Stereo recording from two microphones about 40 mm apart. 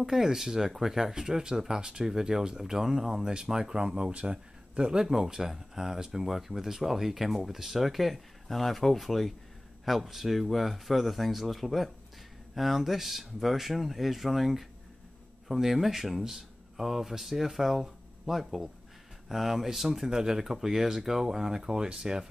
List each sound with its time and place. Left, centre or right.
0.0 s speech: centre
5.0 s speech: centre